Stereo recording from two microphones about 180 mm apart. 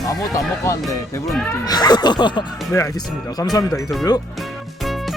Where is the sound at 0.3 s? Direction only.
15° left (ahead or behind).